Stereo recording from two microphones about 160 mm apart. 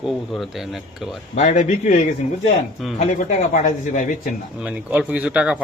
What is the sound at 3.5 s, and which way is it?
Speech, 55° left (ahead or behind).